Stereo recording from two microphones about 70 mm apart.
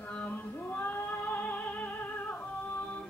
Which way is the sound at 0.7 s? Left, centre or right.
Left.